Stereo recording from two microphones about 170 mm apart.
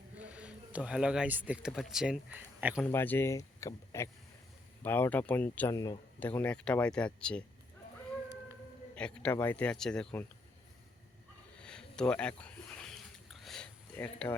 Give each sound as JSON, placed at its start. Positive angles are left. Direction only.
{"t": 0.2, "sound": "speech", "side_deg": -5}
{"t": 2.8, "sound": "speech", "side_deg": 10}
{"t": 9.0, "sound": "speech", "side_deg": 5}
{"t": 11.6, "sound": "a sound", "side_deg": 5}